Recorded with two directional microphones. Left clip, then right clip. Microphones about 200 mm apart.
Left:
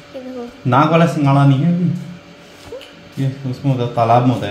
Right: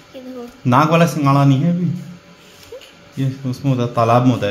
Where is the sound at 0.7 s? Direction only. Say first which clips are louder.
Left 1 dB; 60° right (ahead or behind).